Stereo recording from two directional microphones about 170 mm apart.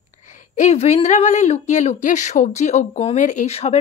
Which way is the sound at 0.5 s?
40° left (ahead or behind).